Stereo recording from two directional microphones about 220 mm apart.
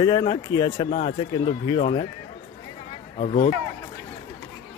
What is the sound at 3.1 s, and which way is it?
Speech, 30° left (ahead or behind).